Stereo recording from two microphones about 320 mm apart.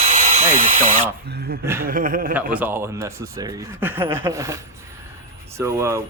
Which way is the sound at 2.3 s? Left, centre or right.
Centre.